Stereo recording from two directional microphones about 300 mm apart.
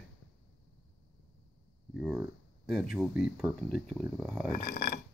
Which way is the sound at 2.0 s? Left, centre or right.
Centre.